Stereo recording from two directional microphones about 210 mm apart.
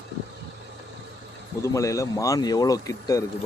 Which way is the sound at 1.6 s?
15° left (ahead or behind).